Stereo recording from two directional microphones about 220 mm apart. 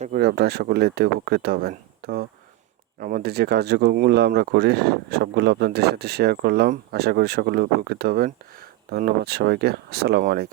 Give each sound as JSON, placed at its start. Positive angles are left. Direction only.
{"t": 0.0, "sound": "speech", "side_deg": -45}